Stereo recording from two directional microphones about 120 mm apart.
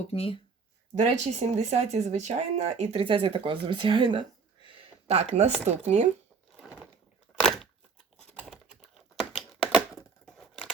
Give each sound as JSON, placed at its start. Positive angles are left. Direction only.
{"t": 0.1, "sound": "speech", "side_deg": 55}
{"t": 0.9, "sound": "speech", "side_deg": -70}
{"t": 3.0, "sound": "speech", "side_deg": -45}
{"t": 4.6, "sound": "speech", "side_deg": -55}
{"t": 7.4, "sound": "a sound", "side_deg": 5}
{"t": 8.2, "sound": "typing", "side_deg": 5}
{"t": 8.7, "sound": "computer keyboard", "side_deg": -10}
{"t": 10.2, "sound": "a sound", "side_deg": 5}